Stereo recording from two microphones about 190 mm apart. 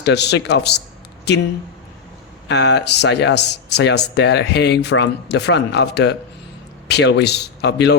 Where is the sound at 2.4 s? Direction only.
65° left (ahead or behind).